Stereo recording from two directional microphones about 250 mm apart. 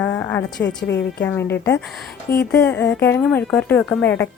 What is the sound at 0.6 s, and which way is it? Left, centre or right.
Speech, left.